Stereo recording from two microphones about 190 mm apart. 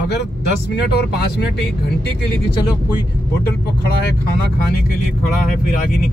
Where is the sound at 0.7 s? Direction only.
60° left (ahead or behind).